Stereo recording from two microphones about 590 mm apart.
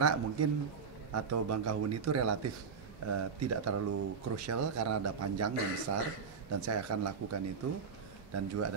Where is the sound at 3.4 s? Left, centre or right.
Right.